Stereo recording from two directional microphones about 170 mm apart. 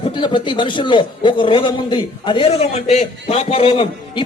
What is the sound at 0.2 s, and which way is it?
A man's voice, 30° left (ahead or behind).